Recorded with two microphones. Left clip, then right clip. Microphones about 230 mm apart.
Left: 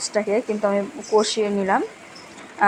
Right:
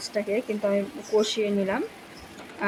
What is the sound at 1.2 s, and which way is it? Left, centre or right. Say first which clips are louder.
Speech: left 4 dB; centre.